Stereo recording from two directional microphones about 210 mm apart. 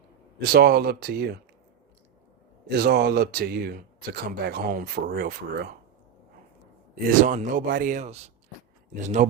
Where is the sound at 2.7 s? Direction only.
50° right (ahead or behind).